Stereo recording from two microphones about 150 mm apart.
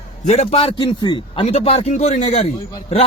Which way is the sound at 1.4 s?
40° left (ahead or behind).